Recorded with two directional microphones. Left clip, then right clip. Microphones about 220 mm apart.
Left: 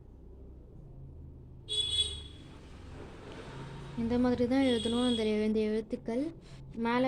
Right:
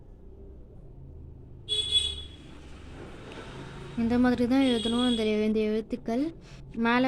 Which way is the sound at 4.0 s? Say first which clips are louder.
Right 4 dB; 15° right (ahead or behind).